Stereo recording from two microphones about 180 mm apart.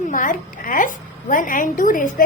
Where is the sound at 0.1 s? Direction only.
50° left (ahead or behind).